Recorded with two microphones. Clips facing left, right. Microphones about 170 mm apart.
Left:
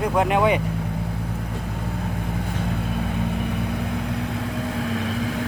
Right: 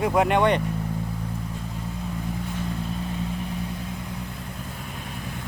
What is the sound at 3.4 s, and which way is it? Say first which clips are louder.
Vehicle: left 6 dB; 75° left (ahead or behind).